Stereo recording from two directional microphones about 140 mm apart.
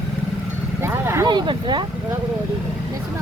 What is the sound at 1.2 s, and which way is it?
Speech, 30° right (ahead or behind).